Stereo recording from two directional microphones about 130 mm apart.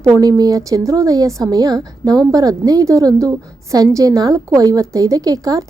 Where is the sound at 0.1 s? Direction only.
30° right (ahead or behind).